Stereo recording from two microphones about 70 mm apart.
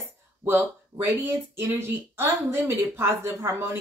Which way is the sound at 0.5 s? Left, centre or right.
Right.